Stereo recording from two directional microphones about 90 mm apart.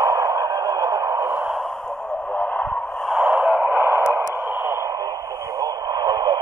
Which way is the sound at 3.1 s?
5° right (ahead or behind).